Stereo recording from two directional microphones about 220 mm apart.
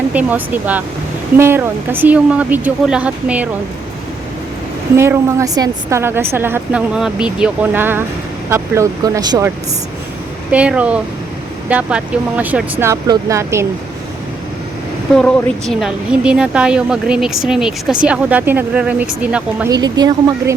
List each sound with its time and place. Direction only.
0.1 s speech: 5° right (ahead or behind)
4.9 s speech: 10° right (ahead or behind)
10.5 s speech: 5° right (ahead or behind)
15.1 s speech: centre (ahead or behind)
19.7 s speech: 15° right (ahead or behind)